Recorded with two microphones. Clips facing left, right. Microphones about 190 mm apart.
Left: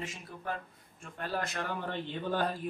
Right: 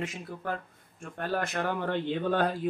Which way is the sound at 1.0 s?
50° right (ahead or behind).